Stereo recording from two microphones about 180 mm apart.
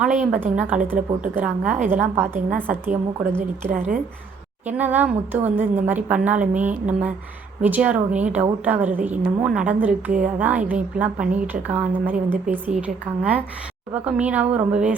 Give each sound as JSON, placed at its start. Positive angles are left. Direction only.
{"t": 0.3, "sound": "a woman's voice", "side_deg": -10}
{"t": 3.7, "sound": "a woman's voice", "side_deg": -50}
{"t": 4.8, "sound": "a woman's voice", "side_deg": -10}
{"t": 13.9, "sound": "a woman's voice", "side_deg": -10}